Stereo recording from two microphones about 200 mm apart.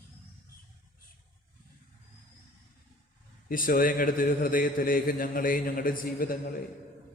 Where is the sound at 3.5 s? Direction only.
45° left (ahead or behind).